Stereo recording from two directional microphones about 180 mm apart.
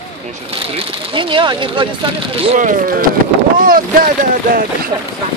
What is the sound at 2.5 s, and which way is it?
Speech, 45° right (ahead or behind).